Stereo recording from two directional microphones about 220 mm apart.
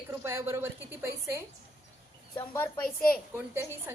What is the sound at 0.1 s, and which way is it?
A woman's voice, 10° right (ahead or behind).